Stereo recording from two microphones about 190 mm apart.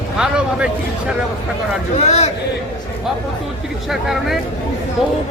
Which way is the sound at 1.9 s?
35° left (ahead or behind).